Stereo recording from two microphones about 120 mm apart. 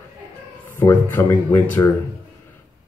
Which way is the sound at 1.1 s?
20° left (ahead or behind).